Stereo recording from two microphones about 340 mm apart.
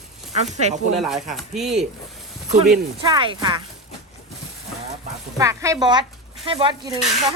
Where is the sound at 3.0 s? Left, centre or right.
Centre.